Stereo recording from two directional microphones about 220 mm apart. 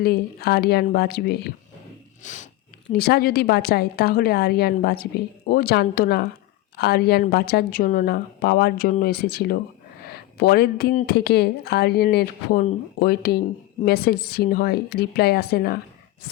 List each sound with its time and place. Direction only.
0.0 s a woman's voice: 45° left (ahead or behind)
2.2 s speech: 35° left (ahead or behind)
2.9 s a woman's voice: 45° left (ahead or behind)